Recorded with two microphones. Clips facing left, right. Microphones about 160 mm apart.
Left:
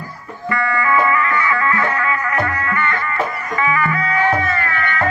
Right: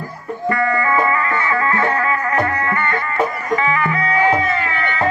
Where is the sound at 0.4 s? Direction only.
35° right (ahead or behind).